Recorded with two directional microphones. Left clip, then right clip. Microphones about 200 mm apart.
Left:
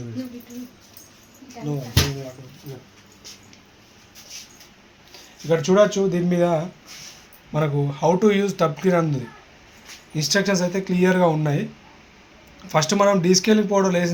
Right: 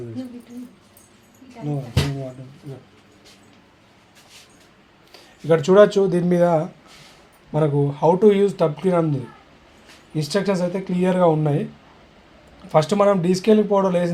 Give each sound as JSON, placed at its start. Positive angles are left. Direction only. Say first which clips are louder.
{"t": 5.1, "sound": "speech", "louder": "right 3 dB", "side_deg": -55}
{"t": 7.5, "sound": "speech", "louder": "right 4 dB", "side_deg": -35}
{"t": 12.6, "sound": "speech", "louder": "right 2 dB", "side_deg": -25}